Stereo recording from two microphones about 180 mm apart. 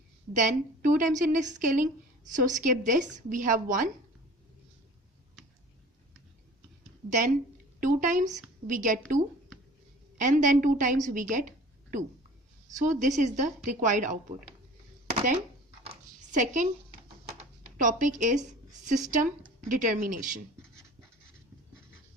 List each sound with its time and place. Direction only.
0.3 s a woman's voice: 45° right (ahead or behind)
7.8 s a woman's voice: 45° right (ahead or behind)
16.3 s a woman's voice: 45° right (ahead or behind)
17.7 s a woman's voice: 45° right (ahead or behind)